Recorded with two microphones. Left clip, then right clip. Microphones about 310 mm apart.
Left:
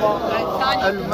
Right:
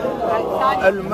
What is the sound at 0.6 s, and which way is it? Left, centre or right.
Speech, right.